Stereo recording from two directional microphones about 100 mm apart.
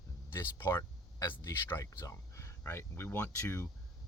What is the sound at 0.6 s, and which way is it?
Speech, 25° left (ahead or behind).